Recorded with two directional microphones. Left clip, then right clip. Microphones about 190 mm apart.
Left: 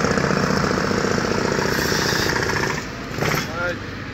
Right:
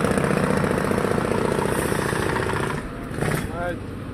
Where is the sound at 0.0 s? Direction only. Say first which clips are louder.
Left 2 dB; 40° left (ahead or behind).